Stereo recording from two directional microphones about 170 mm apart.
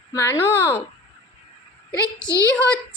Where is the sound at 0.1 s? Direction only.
15° left (ahead or behind).